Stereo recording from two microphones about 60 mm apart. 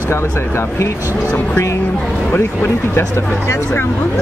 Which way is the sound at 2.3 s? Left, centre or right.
Left.